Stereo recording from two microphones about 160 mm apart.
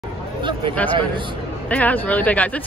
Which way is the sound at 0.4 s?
30° right (ahead or behind).